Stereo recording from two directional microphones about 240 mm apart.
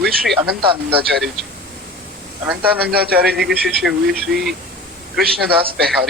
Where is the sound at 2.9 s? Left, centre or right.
Right.